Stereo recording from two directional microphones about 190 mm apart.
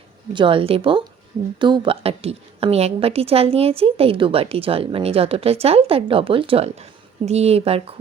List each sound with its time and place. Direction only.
0.3 s a woman's voice: 25° right (ahead or behind)